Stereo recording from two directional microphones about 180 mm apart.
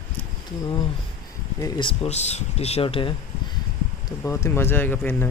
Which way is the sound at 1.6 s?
30° left (ahead or behind).